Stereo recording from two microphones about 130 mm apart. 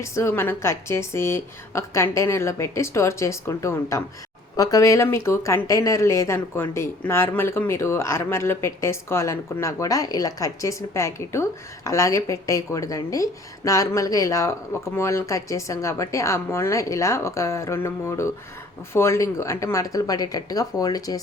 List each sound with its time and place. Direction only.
0.0 s speech: 20° left (ahead or behind)